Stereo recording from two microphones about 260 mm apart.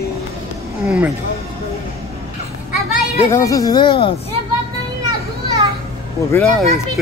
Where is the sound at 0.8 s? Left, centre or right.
Centre.